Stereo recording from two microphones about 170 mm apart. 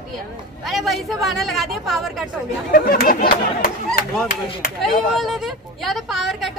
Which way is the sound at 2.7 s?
60° left (ahead or behind).